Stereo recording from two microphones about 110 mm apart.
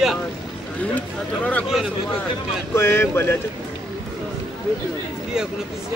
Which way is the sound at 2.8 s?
20° left (ahead or behind).